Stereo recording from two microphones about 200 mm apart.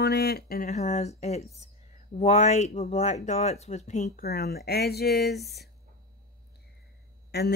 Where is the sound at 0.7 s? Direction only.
35° left (ahead or behind); by 5.7 s 55° left (ahead or behind).